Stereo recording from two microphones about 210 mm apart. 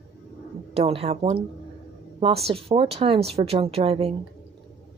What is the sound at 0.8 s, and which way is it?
Speech, 25° right (ahead or behind).